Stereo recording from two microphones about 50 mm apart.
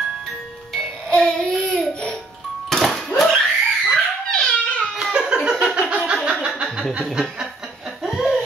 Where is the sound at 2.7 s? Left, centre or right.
Centre.